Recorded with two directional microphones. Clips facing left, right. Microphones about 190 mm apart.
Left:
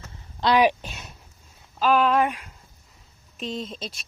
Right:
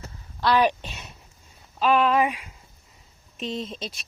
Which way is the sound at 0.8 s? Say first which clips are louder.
Even; centre (ahead or behind).